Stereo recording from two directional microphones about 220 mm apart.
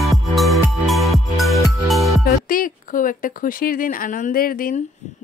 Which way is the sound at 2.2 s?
40° left (ahead or behind).